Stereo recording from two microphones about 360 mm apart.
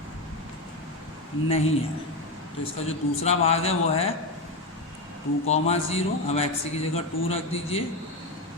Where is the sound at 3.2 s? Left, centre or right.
Centre.